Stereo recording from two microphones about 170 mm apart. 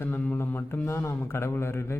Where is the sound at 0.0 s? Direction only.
10° left (ahead or behind).